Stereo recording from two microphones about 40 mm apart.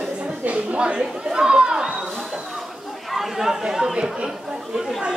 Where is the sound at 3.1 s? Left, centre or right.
Centre.